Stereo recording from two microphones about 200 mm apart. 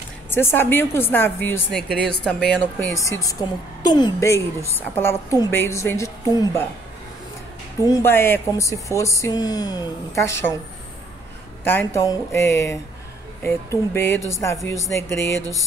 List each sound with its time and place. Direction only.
0.3 s a woman's voice: 10° left (ahead or behind)
7.8 s a woman's voice: 15° left (ahead or behind)
11.6 s a woman's voice: 10° left (ahead or behind)